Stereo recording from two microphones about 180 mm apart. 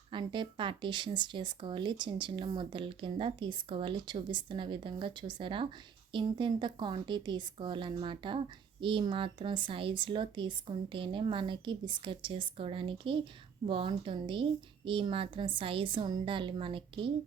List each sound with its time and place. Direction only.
0.1 s speech: 25° right (ahead or behind)